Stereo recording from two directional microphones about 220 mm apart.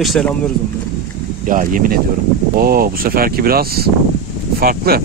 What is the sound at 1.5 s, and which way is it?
Speech, 40° right (ahead or behind).